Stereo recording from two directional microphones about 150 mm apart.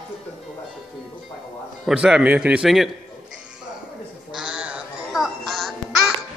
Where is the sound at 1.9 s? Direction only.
5° right (ahead or behind).